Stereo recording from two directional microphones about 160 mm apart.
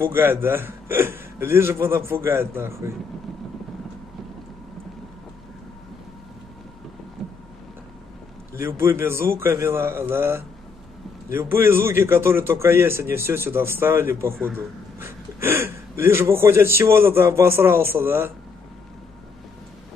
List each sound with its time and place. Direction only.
0.0 s a man's voice: 15° right (ahead or behind)
7.2 s boat: centre (ahead or behind)
8.5 s a man's voice: 15° right (ahead or behind)